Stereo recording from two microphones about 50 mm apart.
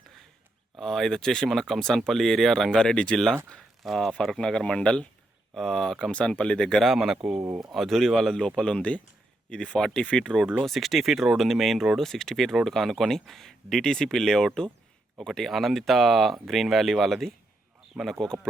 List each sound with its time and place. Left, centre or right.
0.8 s speech: centre
2.9 s speech: left
3.6 s a sound: centre
4.4 s speech: centre
5.5 s speech: centre
6.1 s speech: left
6.8 s speech: centre
10.7 s speech: centre